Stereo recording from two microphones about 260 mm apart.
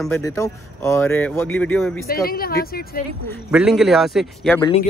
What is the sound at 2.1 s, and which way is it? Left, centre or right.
Speech, left.